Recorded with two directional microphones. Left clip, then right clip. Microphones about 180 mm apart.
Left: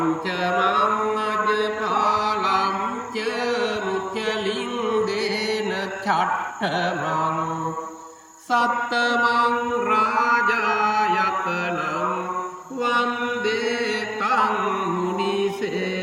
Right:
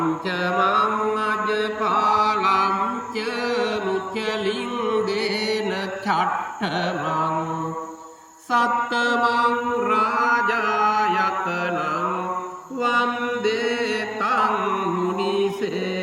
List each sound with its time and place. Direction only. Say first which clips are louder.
0.3 s mantra: right 1 dB; 10° right (ahead or behind)
2.1 s chant: right 3 dB; 5° right (ahead or behind)
2.5 s mantra: right 2 dB; 30° right (ahead or behind)
5.0 s mantra: even; centre (ahead or behind)
6.6 s mantra: left 1 dB; 5° right (ahead or behind)
8.5 s mantra: right 1 dB; 5° right (ahead or behind)
14.3 s music: even; 30° right (ahead or behind)